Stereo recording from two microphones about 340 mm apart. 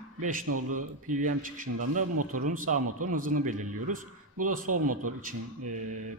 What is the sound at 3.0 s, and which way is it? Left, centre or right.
Speech, right.